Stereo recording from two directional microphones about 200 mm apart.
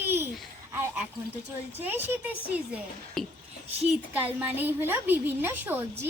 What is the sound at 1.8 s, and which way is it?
Speech, 10° right (ahead or behind).